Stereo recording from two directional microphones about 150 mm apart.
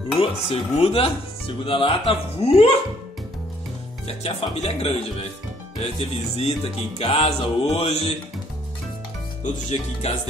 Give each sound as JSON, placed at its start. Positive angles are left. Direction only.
{"t": 0.2, "sound": "speech", "side_deg": 45}
{"t": 4.2, "sound": "music", "side_deg": 45}
{"t": 9.4, "sound": "music", "side_deg": 50}